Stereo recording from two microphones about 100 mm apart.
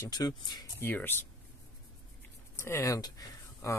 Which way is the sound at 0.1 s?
45° left (ahead or behind).